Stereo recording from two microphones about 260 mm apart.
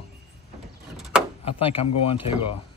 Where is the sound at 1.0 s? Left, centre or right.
Centre.